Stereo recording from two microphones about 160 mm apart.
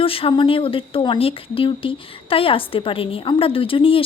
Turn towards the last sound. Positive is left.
turn(degrees=35)  # may be behind; listen again after turning